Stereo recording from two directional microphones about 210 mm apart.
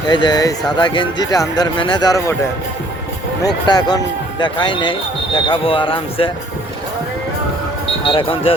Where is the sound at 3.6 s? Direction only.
20° left (ahead or behind).